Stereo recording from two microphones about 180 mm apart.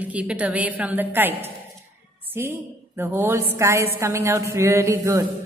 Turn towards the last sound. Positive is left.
turn(degrees=-15)  # may be behind; listen again after turning